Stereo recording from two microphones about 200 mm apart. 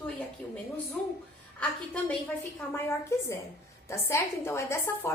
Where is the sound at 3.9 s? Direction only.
15° left (ahead or behind).